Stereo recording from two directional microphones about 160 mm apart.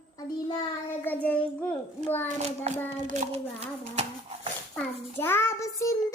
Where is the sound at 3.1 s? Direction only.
45° right (ahead or behind).